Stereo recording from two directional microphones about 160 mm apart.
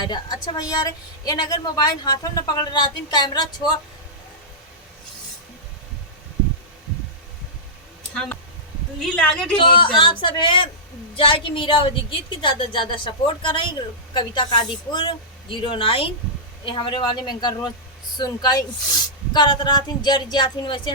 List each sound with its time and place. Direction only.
0.0 s a woman's voice: 25° left (ahead or behind)
9.1 s speech: 5° left (ahead or behind)
9.6 s a woman's voice: 30° left (ahead or behind)